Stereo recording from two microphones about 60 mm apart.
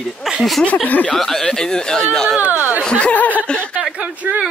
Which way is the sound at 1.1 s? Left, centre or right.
Centre.